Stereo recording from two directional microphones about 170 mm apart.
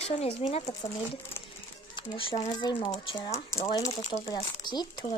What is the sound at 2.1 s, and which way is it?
Speech, 30° left (ahead or behind).